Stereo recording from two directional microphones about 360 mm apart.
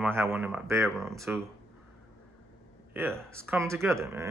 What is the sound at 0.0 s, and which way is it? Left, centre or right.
Speech, centre.